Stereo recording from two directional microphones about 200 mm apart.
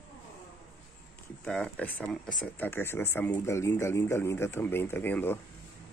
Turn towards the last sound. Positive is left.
turn(degrees=10)  # may be behind; listen again after turning